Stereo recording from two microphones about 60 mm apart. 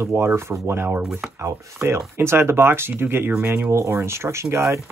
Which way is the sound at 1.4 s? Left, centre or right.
Right.